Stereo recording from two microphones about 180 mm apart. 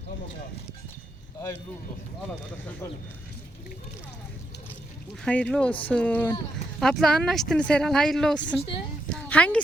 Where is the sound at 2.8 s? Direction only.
15° left (ahead or behind).